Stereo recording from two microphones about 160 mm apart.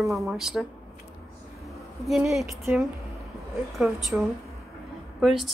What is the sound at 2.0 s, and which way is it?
Speech, centre (ahead or behind).